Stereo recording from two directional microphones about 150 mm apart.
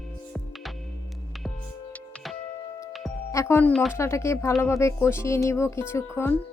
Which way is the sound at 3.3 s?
15° left (ahead or behind).